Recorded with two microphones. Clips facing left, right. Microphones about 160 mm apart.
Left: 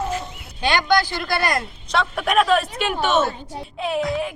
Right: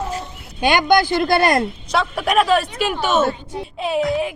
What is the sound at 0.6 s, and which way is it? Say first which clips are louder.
Speech: right 4 dB; 20° right (ahead or behind).